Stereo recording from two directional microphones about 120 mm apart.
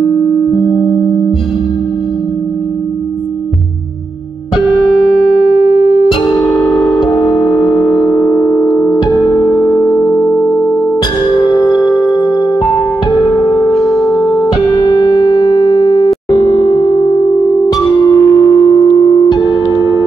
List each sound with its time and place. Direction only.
0.0 s music: 30° left (ahead or behind)
6.0 s music: 40° left (ahead or behind)
16.3 s a sound: 40° left (ahead or behind)
17.7 s music: 35° left (ahead or behind)